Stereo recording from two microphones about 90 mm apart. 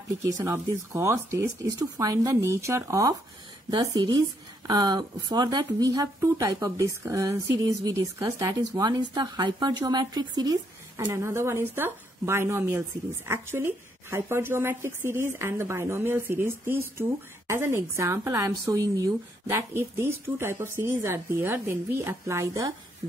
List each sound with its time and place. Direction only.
0.2 s speech: 35° right (ahead or behind)
8.4 s speech: 45° right (ahead or behind)
11.1 s a woman's voice: 30° right (ahead or behind)
19.5 s a woman's voice: 30° right (ahead or behind)